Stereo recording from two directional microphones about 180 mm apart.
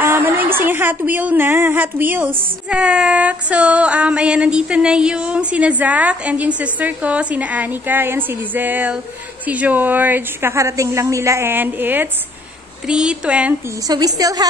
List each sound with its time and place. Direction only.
0.0 s a woman's voice: 10° right (ahead or behind)
2.7 s female singing: 5° right (ahead or behind)
12.8 s speech: 5° right (ahead or behind)
13.8 s a woman's voice: 20° right (ahead or behind)